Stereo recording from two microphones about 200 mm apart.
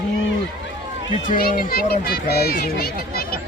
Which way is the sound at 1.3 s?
45° left (ahead or behind).